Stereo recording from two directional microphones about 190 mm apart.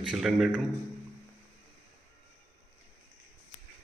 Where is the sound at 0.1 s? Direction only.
Centre (ahead or behind).